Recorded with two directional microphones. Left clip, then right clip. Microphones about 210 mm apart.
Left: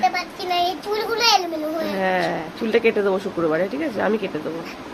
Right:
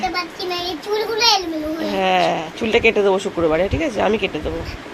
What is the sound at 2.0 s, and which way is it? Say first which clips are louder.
Speech: right 6 dB; 5° right (ahead or behind).